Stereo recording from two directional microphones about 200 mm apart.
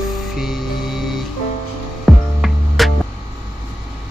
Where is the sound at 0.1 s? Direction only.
Centre (ahead or behind).